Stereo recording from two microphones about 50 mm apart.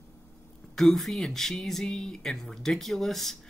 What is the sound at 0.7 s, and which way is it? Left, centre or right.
Speech, centre.